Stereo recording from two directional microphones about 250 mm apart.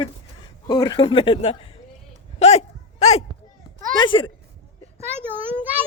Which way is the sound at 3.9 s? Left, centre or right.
Centre.